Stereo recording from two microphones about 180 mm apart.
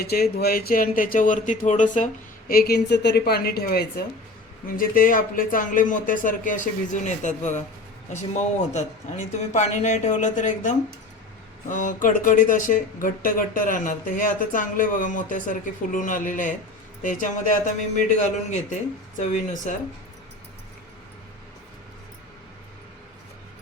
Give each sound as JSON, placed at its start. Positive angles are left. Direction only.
{"t": 0.0, "sound": "a woman's voice", "side_deg": 60}
{"t": 2.5, "sound": "a woman's voice", "side_deg": 60}